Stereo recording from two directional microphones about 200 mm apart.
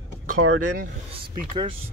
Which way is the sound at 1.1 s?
25° right (ahead or behind).